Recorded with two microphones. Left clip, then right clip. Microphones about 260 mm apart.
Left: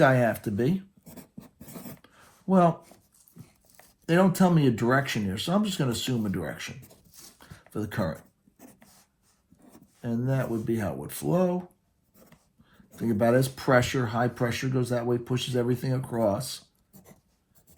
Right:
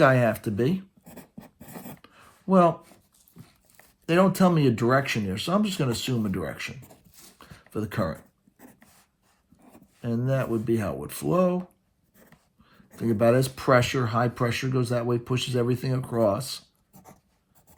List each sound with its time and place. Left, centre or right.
0.0 s speech: right
1.6 s filing: centre
2.5 s speech: right
4.0 s speech: right
7.3 s a sound: right
10.0 s speech: right
12.7 s speech: right